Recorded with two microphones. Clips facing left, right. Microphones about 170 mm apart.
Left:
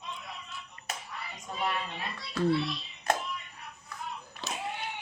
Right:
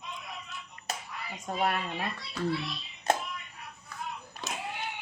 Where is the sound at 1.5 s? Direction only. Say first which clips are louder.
Right 6 dB; 50° right (ahead or behind).